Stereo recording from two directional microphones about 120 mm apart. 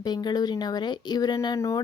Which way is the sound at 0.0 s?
35° left (ahead or behind).